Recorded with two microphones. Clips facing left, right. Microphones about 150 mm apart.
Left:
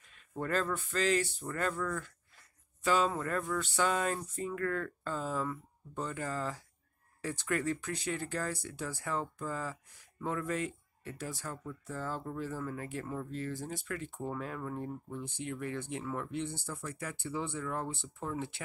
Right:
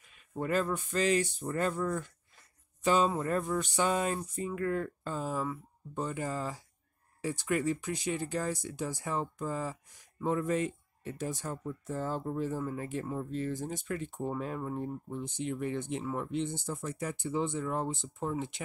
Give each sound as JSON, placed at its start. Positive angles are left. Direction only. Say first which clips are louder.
{"t": 0.4, "sound": "speech", "louder": "right 3 dB", "side_deg": -15}